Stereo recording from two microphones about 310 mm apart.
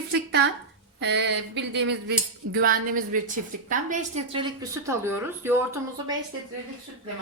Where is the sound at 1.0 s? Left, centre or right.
Right; by 5.6 s centre.